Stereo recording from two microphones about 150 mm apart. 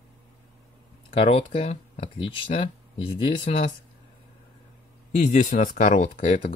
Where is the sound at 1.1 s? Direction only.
40° left (ahead or behind).